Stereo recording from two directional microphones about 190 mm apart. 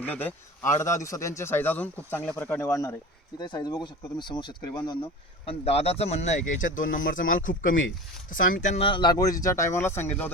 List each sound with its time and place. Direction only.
0.0 s a man's voice: 10° left (ahead or behind)